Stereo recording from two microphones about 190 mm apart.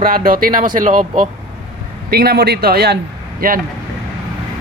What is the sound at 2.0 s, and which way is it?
Speech, 55° right (ahead or behind).